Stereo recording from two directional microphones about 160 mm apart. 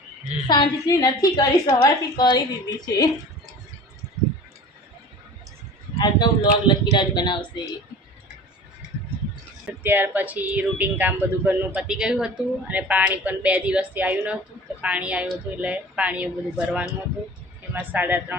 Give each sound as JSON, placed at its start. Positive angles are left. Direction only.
{"t": 0.4, "sound": "a woman's voice", "side_deg": 25}
{"t": 6.0, "sound": "a woman's voice", "side_deg": 30}
{"t": 9.8, "sound": "speech", "side_deg": -10}